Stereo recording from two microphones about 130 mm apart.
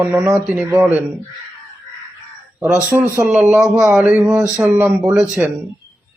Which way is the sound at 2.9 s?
5° right (ahead or behind).